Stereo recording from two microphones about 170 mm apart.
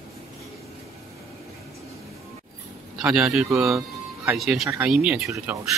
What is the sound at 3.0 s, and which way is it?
Speech, 5° right (ahead or behind).